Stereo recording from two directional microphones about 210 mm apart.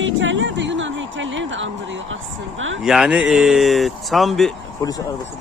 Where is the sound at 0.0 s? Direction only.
65° right (ahead or behind).